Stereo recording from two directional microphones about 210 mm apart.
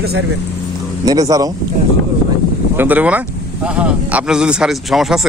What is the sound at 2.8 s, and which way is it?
Speech, 10° right (ahead or behind).